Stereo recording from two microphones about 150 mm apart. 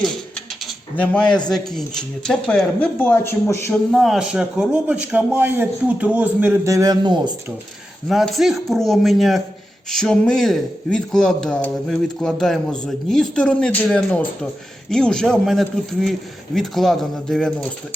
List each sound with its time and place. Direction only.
0.9 s a man's voice: 10° left (ahead or behind)
3.7 s a man's voice: centre (ahead or behind)
6.7 s a man's voice: 25° right (ahead or behind)
8.0 s a man's voice: centre (ahead or behind)